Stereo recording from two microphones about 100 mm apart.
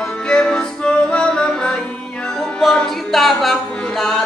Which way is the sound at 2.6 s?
5° left (ahead or behind).